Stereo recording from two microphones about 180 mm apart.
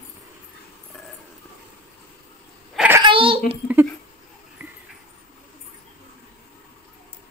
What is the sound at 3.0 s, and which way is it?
Babbling, 30° right (ahead or behind).